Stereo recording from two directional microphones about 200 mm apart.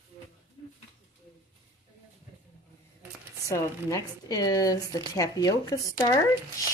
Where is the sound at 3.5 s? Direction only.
15° left (ahead or behind).